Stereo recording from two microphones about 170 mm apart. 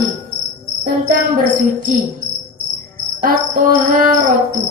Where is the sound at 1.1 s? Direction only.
55° right (ahead or behind).